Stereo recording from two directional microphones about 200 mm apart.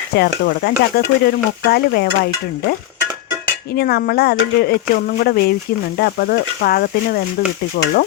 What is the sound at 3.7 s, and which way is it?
Speech, 50° left (ahead or behind).